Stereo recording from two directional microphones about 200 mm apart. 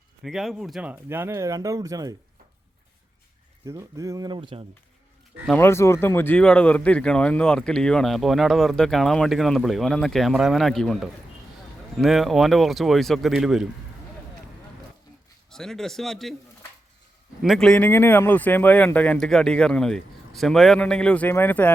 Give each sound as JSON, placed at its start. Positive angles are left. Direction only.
{"t": 0.2, "sound": "speech", "side_deg": 0}
{"t": 3.7, "sound": "speech", "side_deg": -15}
{"t": 5.5, "sound": "speech", "side_deg": 10}
{"t": 15.4, "sound": "speech", "side_deg": 0}
{"t": 17.4, "sound": "speech", "side_deg": 0}